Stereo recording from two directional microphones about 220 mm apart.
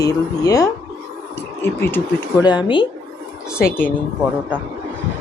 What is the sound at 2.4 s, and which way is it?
Speech, 20° left (ahead or behind).